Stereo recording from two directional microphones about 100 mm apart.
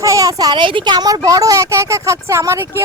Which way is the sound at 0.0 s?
35° right (ahead or behind).